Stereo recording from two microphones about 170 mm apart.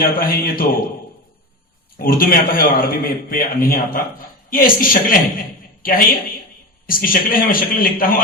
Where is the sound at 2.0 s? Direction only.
60° left (ahead or behind).